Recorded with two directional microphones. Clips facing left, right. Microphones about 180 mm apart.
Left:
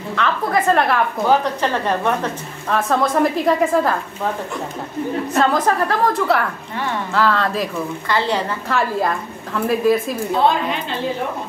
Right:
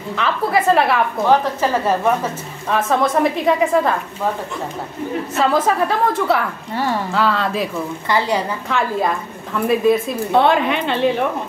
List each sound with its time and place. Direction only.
0.1 s a woman's voice: 5° right (ahead or behind)
5.4 s a woman's voice: 5° right (ahead or behind)
8.6 s a woman's voice: centre (ahead or behind)
10.3 s a woman's voice: 65° right (ahead or behind)